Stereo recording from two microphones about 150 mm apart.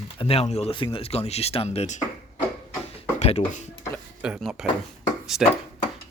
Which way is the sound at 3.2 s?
45° left (ahead or behind).